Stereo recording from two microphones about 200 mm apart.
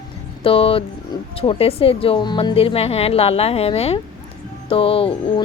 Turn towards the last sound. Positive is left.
turn(degrees=25)  # may be behind; listen again after turning